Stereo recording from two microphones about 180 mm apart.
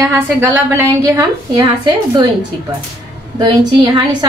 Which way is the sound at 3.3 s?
25° right (ahead or behind).